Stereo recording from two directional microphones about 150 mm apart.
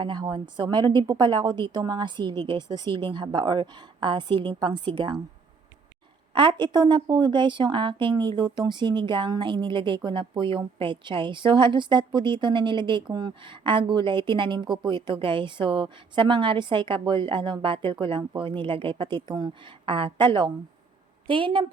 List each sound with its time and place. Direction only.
0.0 s a woman's voice: 30° right (ahead or behind)
6.3 s a woman's voice: 30° right (ahead or behind)